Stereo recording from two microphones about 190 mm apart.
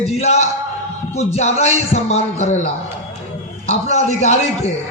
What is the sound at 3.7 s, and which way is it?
A man's voice, 35° left (ahead or behind).